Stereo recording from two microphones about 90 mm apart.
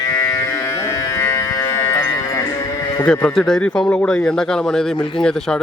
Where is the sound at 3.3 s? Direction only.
5° left (ahead or behind).